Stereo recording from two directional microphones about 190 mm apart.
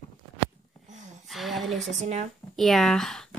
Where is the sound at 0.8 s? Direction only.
40° right (ahead or behind).